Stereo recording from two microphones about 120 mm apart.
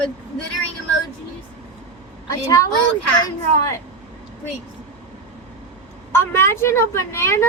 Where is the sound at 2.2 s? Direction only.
30° left (ahead or behind).